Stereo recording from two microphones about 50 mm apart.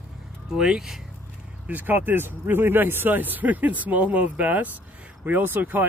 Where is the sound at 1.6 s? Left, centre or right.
Right.